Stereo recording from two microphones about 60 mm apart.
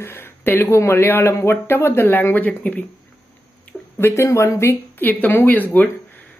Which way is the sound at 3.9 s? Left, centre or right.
Left.